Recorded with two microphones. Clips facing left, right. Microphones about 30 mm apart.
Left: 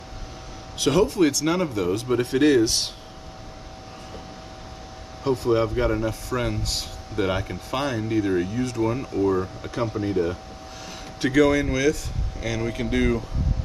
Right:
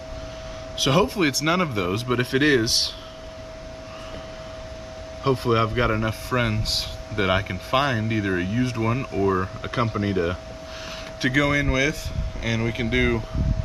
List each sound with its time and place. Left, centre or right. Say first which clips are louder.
0.7 s speech: left 1 dB; right
5.2 s speech: even; right
11.1 s speech: left 2 dB; centre